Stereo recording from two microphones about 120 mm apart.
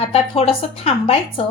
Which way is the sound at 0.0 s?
55° left (ahead or behind).